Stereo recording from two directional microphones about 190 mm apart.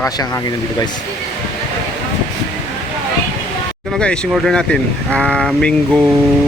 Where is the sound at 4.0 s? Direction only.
5° left (ahead or behind).